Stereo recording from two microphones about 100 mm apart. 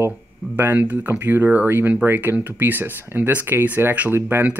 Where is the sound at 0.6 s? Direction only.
20° right (ahead or behind).